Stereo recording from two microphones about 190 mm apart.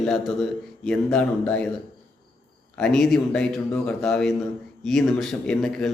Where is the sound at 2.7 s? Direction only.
Centre (ahead or behind).